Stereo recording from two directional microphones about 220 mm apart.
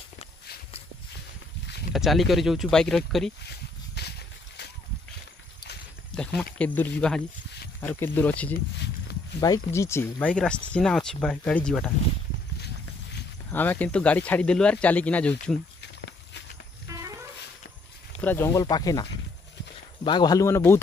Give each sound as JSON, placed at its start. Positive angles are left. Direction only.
{"t": 1.9, "sound": "speech", "side_deg": 0}
{"t": 4.0, "sound": "a sound", "side_deg": 50}
{"t": 6.6, "sound": "speech", "side_deg": 5}
{"t": 13.5, "sound": "speech", "side_deg": 10}
{"t": 16.8, "sound": "a sound", "side_deg": -15}
{"t": 18.2, "sound": "speech", "side_deg": 10}